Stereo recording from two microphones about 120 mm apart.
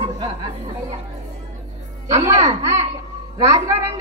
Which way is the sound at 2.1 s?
65° right (ahead or behind).